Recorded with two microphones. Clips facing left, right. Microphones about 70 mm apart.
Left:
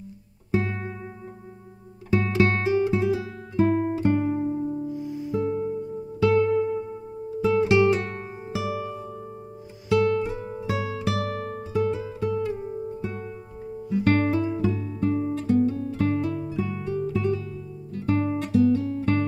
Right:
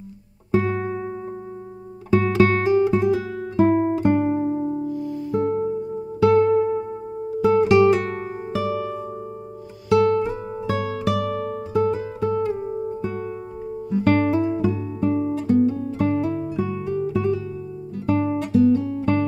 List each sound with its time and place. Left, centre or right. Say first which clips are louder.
0.5 s music: right 6 dB; right
2.1 s guitar: right 5 dB; right
4.8 s music: right 4 dB; centre
5.3 s music: right 4 dB; right
9.8 s music: right 4 dB; right
13.9 s music: right 3 dB; right
15.0 s guitar: right 3 dB; right